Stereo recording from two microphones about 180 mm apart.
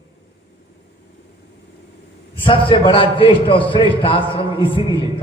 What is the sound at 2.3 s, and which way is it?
A man's voice, 30° left (ahead or behind).